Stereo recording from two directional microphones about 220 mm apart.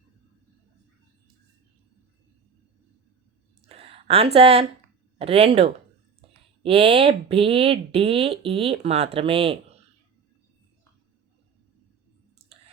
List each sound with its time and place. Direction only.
3.7 s a sound: 25° right (ahead or behind)
5.1 s speech: 25° right (ahead or behind)
12.5 s chewing: 25° right (ahead or behind)